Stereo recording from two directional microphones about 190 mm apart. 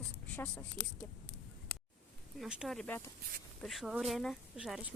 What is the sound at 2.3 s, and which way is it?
Speech, 5° right (ahead or behind).